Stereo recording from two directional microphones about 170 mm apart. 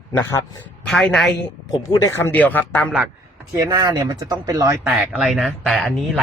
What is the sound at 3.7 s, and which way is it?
Speech, 25° right (ahead or behind).